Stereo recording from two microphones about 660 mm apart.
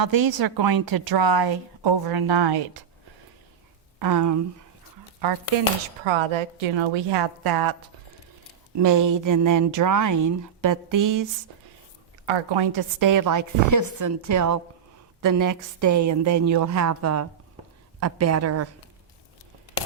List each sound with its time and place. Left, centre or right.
0.0 s a woman's voice: right
4.0 s speech: right
6.1 s a woman's voice: right
12.2 s speech: right